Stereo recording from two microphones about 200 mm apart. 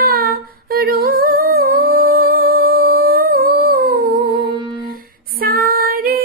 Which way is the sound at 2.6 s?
50° right (ahead or behind).